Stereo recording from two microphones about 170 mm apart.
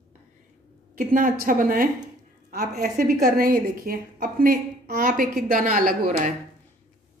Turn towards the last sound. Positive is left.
turn(degrees=-55)  # may be behind; listen again after turning